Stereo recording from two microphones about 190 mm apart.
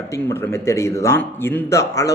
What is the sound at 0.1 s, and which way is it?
Speech, 15° left (ahead or behind).